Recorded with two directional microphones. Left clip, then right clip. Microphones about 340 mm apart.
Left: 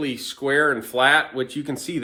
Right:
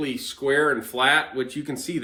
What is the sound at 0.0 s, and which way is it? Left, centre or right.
Speech, centre.